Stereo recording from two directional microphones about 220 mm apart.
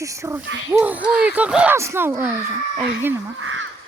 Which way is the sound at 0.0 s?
15° right (ahead or behind).